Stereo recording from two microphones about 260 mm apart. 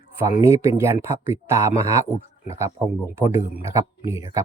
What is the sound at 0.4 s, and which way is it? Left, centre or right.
Speech, centre.